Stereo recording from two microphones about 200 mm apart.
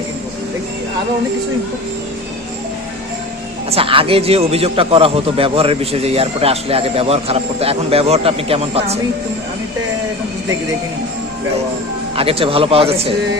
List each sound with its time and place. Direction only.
3.7 s a man's voice: 30° right (ahead or behind)
12.1 s a man's voice: 30° right (ahead or behind)